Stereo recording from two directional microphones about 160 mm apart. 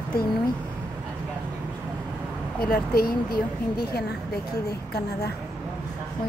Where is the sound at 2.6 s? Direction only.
70° left (ahead or behind).